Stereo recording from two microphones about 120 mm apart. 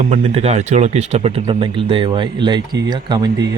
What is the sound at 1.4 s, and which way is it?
Speech, 45° right (ahead or behind).